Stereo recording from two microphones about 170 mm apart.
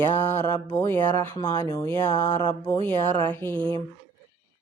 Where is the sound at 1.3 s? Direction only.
25° left (ahead or behind).